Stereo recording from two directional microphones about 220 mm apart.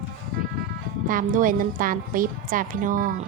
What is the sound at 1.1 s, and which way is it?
A woman's voice, 40° right (ahead or behind).